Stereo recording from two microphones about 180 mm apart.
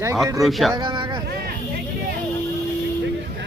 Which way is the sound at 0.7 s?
25° right (ahead or behind).